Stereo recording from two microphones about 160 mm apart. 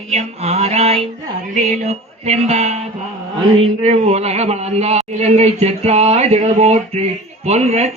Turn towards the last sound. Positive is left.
turn(degrees=-40)  # may be behind; listen again after turning